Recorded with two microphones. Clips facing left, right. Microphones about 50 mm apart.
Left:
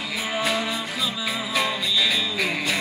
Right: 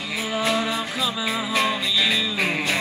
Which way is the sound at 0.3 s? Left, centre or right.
Centre.